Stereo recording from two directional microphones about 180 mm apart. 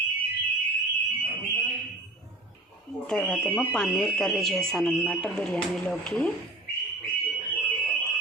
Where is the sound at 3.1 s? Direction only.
5° left (ahead or behind).